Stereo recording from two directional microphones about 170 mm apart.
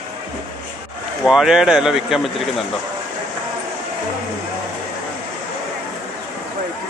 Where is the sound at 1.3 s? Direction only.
5° right (ahead or behind).